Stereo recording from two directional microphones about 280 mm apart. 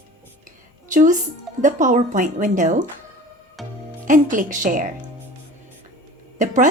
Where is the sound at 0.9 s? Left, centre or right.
Right.